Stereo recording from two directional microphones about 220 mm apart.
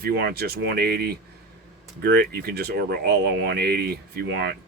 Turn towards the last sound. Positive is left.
turn(degrees=-45)  # may be behind; listen again after turning